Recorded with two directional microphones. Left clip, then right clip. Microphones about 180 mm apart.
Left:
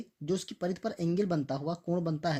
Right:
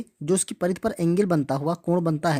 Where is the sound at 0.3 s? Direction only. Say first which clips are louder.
Right 9 dB; 45° right (ahead or behind).